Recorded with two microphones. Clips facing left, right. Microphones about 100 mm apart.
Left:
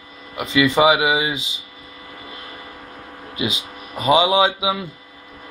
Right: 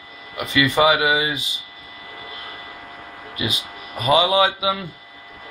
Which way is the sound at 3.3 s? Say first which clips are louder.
Left 2 dB; 20° left (ahead or behind).